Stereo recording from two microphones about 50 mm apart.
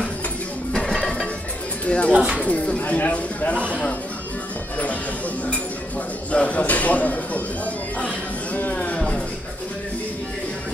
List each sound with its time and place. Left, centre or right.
1.9 s speech: left
2.1 s speech: centre
2.4 s speech: left
6.3 s speech: left
8.5 s speech: left